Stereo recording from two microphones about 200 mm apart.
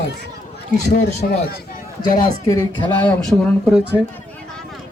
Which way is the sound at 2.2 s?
20° left (ahead or behind).